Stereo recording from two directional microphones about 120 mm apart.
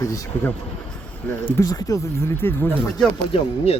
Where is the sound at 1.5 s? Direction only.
30° left (ahead or behind).